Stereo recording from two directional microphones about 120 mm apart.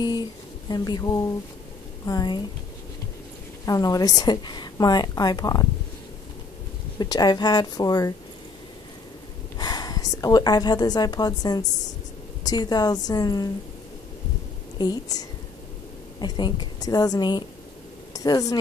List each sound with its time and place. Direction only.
0.0 s a woman's voice: 35° left (ahead or behind)
3.6 s a woman's voice: 30° left (ahead or behind)
7.0 s a woman's voice: 35° left (ahead or behind)
9.6 s a woman's voice: 35° left (ahead or behind)
14.8 s a woman's voice: 35° left (ahead or behind)